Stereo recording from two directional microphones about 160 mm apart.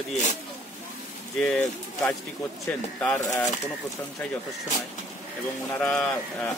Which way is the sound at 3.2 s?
20° left (ahead or behind).